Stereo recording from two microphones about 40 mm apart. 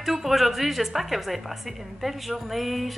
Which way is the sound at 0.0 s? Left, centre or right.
Centre.